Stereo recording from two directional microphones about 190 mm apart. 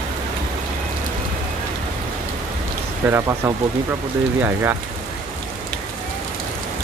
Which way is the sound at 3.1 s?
15° right (ahead or behind).